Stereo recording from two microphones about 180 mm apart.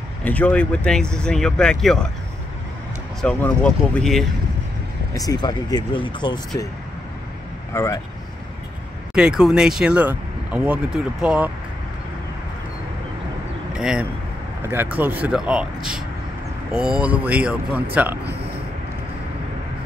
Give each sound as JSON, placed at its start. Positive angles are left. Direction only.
{"t": 0.2, "sound": "speech", "side_deg": 10}
{"t": 3.2, "sound": "speech", "side_deg": 5}
{"t": 5.1, "sound": "speech", "side_deg": 20}
{"t": 7.7, "sound": "speech", "side_deg": 15}
{"t": 9.1, "sound": "speech", "side_deg": -5}
{"t": 13.7, "sound": "speech", "side_deg": -5}